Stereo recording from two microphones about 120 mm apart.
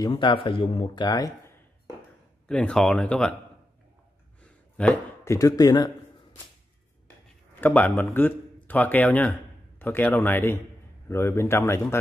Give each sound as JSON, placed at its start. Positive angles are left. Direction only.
{"t": 0.0, "sound": "speech", "side_deg": 40}
{"t": 1.0, "sound": "speech", "side_deg": 30}
{"t": 2.4, "sound": "speech", "side_deg": 10}
{"t": 4.8, "sound": "speech", "side_deg": 10}
{"t": 5.2, "sound": "speech", "side_deg": 25}
{"t": 7.6, "sound": "speech", "side_deg": 15}